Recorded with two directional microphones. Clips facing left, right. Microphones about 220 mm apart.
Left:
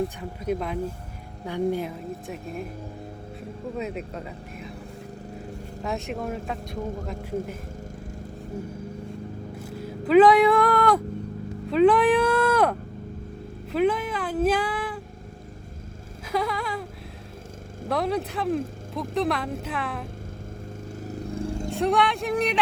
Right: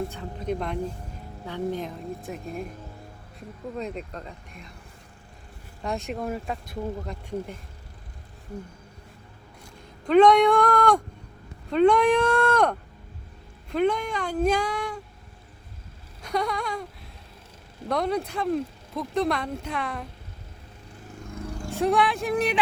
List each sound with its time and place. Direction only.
0.4 s speech: 5° left (ahead or behind)
3.8 s speech: 5° left (ahead or behind)
5.8 s speech: centre (ahead or behind)
9.8 s speech: 5° left (ahead or behind)
11.7 s a sound: centre (ahead or behind)
13.7 s speech: 5° left (ahead or behind)
16.2 s a sound: 5° left (ahead or behind)
17.8 s speech: centre (ahead or behind)
21.1 s vehicle: 30° left (ahead or behind)
21.7 s speech: centre (ahead or behind)